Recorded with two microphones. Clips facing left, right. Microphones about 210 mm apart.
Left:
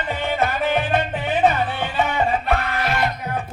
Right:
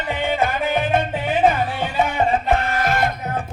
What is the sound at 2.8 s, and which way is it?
Music, 50° right (ahead or behind).